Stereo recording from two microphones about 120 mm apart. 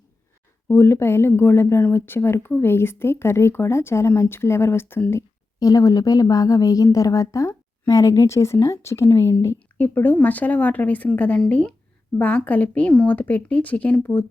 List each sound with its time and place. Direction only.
0.7 s a woman's voice: 20° left (ahead or behind)
5.5 s a woman's voice: 30° left (ahead or behind); by 14.3 s 10° left (ahead or behind)